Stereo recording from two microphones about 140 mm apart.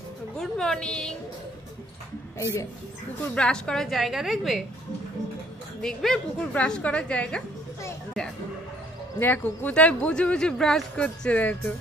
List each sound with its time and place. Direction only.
0.4 s a woman's voice: 5° left (ahead or behind)
3.3 s a woman's voice: 5° left (ahead or behind)
5.8 s speech: 5° left (ahead or behind)
9.2 s speech: 15° left (ahead or behind)